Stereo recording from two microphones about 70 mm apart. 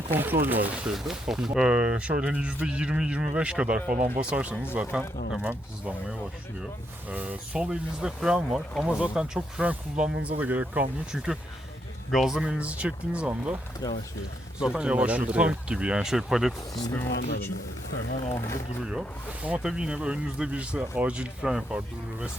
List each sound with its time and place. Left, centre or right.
0.1 s speech: right
0.9 s speech: centre
1.5 s speech: centre
12.1 s speech: centre
12.5 s speech: centre
13.8 s speech: left
14.6 s speech: centre
16.9 s speech: left
18.8 s speech: centre
19.4 s speech: centre